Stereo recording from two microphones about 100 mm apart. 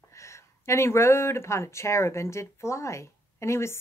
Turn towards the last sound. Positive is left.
turn(degrees=30)  # may be behind; listen again after turning